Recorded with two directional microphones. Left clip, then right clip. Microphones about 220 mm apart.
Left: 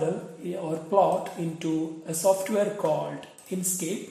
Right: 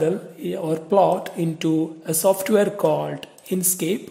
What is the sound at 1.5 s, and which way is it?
Speech, 45° right (ahead or behind).